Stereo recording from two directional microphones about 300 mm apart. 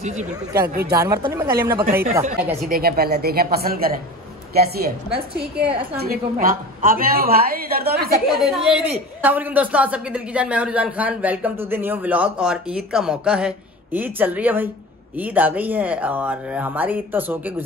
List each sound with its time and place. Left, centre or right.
0.0 s a woman's voice: right
0.9 s a woman's voice: centre
2.7 s a woman's voice: right
8.3 s speech: centre